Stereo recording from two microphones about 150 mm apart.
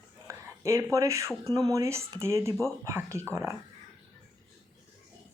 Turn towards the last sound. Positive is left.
turn(degrees=-20)  # may be behind; listen again after turning